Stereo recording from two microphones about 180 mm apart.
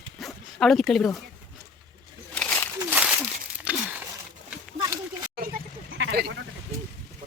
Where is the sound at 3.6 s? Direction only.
10° right (ahead or behind).